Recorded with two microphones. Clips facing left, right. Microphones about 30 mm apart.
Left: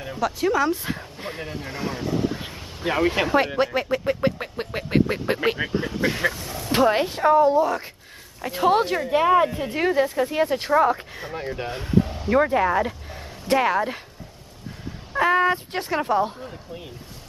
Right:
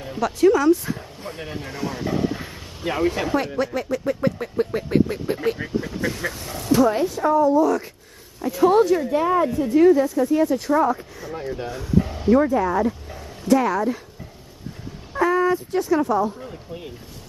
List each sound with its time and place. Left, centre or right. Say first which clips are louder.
0.4 s speech: right 6 dB; centre
0.7 s speech: right 7 dB; left
1.4 s speech: right 3 dB; centre
1.7 s speech: right 1 dB; centre
2.1 s speech: right 1 dB; centre
2.5 s a sound: left 1 dB; centre
3.3 s speech: left 2 dB; left
6.3 s speech: even; centre
6.7 s speech: right 1 dB; left
12.3 s speech: right 2 dB; left
15.1 s speech: even; left